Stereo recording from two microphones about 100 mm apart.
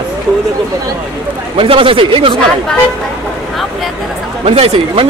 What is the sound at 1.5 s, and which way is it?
Speech, 60° right (ahead or behind).